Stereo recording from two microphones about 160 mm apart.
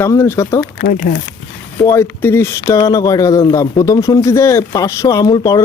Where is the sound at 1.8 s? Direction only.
15° left (ahead or behind).